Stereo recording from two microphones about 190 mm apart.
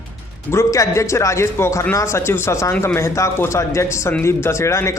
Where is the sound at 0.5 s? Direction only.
15° left (ahead or behind).